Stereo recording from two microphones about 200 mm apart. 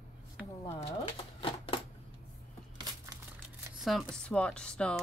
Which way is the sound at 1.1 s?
30° left (ahead or behind).